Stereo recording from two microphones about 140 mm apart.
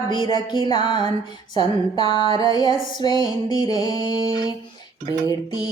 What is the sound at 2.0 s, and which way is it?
Music, 40° right (ahead or behind).